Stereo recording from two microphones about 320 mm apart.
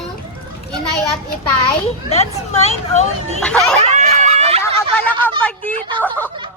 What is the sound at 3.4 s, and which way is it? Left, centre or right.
Speech, centre.